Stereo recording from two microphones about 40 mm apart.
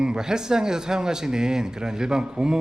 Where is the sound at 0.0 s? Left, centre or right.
Centre.